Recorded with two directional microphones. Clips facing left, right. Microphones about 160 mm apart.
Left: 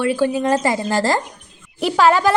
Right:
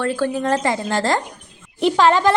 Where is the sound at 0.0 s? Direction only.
10° left (ahead or behind).